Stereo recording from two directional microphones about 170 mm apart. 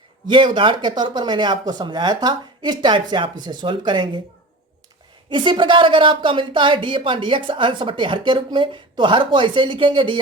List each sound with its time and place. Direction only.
0.3 s a woman's voice: 30° right (ahead or behind)
5.3 s a woman's voice: 30° right (ahead or behind)